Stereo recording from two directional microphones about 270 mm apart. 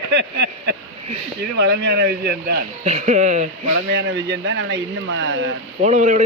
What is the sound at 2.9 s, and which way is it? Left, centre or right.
Speech, right.